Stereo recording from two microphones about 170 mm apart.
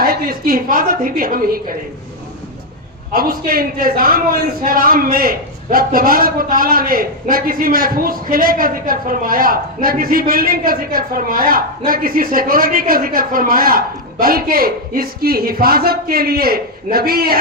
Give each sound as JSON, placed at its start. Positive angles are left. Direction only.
{"t": 0.0, "sound": "a man's voice", "side_deg": -60}
{"t": 3.1, "sound": "a man's voice", "side_deg": -60}